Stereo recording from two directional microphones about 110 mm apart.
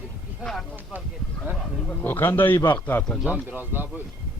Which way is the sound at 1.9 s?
20° left (ahead or behind).